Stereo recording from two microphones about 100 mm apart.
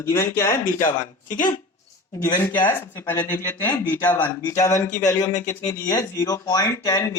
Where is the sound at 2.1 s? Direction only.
40° left (ahead or behind).